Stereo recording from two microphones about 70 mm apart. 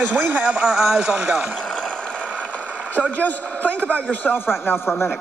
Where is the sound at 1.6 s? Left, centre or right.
Centre.